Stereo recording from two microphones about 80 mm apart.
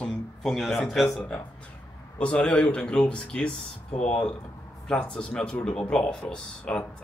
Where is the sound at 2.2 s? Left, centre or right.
Centre.